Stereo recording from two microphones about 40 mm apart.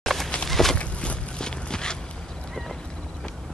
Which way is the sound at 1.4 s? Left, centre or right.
Centre.